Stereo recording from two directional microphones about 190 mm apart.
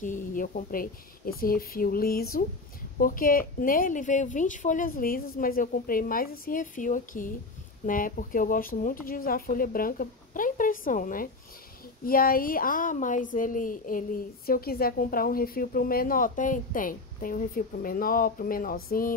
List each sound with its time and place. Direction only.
0.0 s speech: 45° left (ahead or behind)